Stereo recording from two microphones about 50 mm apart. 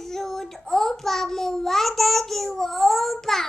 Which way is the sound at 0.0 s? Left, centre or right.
Centre.